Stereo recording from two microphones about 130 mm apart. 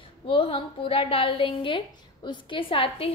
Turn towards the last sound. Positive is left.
turn(degrees=45)  # may be behind; listen again after turning